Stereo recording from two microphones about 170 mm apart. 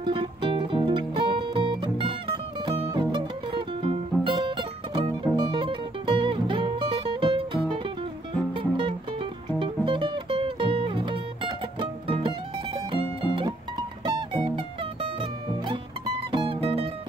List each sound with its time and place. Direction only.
0.0 s music: 30° right (ahead or behind)
16.3 s music: 30° right (ahead or behind)